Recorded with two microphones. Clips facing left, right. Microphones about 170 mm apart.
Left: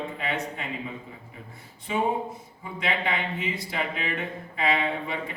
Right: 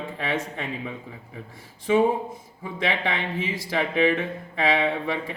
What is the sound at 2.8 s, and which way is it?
A man's voice, 90° right.